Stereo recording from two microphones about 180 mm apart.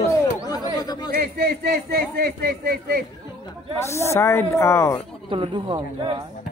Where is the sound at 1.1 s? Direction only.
60° right (ahead or behind).